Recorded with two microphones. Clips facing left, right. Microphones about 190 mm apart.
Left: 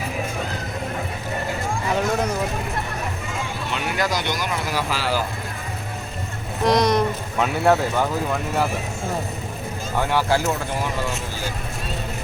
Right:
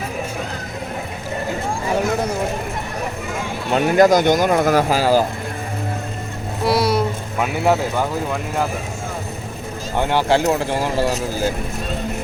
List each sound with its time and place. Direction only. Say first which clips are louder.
3.7 s speech: right 13 dB; 45° right (ahead or behind)
6.7 s speech: even; 5° right (ahead or behind)
10.0 s speech: right 4 dB; 25° right (ahead or behind)